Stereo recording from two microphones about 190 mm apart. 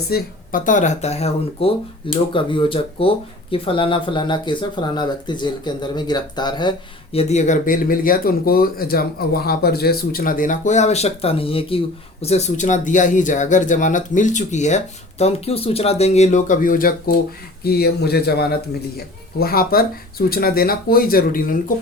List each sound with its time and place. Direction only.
0.1 s speech: 45° left (ahead or behind)